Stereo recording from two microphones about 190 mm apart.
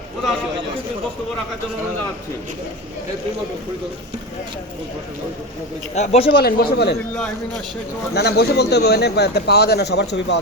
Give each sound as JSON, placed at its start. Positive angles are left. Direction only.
{"t": 5.9, "sound": "a man's voice", "side_deg": 35}
{"t": 6.4, "sound": "speech", "side_deg": 60}
{"t": 8.1, "sound": "speech", "side_deg": 60}